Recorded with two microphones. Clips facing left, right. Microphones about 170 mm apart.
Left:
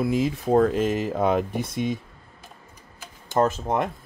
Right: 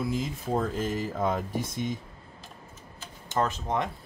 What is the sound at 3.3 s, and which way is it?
Speech, 45° left (ahead or behind).